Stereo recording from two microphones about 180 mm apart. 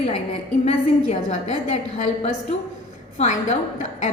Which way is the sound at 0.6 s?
35° left (ahead or behind).